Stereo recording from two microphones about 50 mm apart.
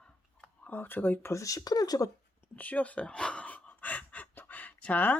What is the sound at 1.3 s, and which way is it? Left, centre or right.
Speech, left.